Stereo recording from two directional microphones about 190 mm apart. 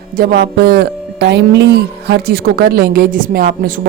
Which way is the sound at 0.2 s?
55° right (ahead or behind).